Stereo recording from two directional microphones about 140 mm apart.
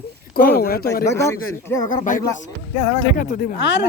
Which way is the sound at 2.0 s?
70° left (ahead or behind).